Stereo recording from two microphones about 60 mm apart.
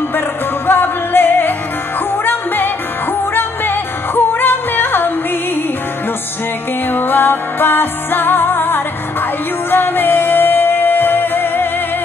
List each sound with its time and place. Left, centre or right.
0.7 s music: left
6.9 s music: left